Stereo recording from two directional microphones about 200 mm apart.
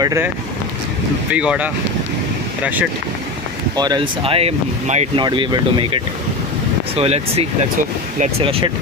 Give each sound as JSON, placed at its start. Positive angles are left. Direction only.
{"t": 0.0, "sound": "speech", "side_deg": -15}
{"t": 1.3, "sound": "speech", "side_deg": -5}
{"t": 3.8, "sound": "speech", "side_deg": -20}